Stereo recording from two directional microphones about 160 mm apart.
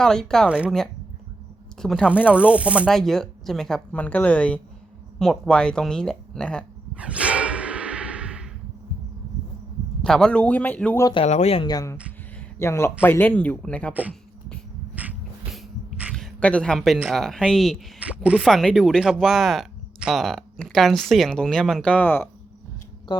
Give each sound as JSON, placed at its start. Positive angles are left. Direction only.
{"t": 0.0, "sound": "speech", "side_deg": 5}
{"t": 6.9, "sound": "a sound", "side_deg": -5}
{"t": 10.0, "sound": "speech", "side_deg": 5}
{"t": 11.0, "sound": "speech", "side_deg": 30}
{"t": 11.7, "sound": "speech", "side_deg": 20}
{"t": 15.0, "sound": "a sound", "side_deg": -10}
{"t": 16.1, "sound": "speech", "side_deg": 5}